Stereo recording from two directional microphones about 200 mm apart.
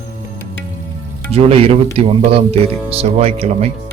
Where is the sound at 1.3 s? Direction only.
30° right (ahead or behind).